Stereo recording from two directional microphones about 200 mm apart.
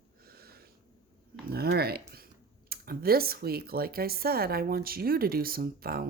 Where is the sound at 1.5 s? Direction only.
50° right (ahead or behind).